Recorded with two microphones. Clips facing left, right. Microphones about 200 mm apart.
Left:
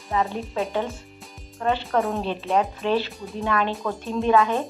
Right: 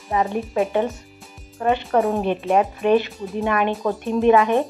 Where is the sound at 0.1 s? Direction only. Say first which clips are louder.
Right 3 dB; 15° right (ahead or behind).